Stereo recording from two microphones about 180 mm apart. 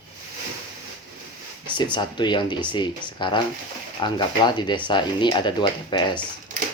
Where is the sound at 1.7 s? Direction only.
25° left (ahead or behind).